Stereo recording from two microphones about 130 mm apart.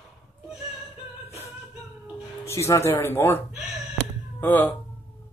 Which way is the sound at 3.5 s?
Centre (ahead or behind).